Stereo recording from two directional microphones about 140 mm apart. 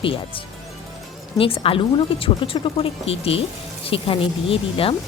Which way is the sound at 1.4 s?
40° left (ahead or behind).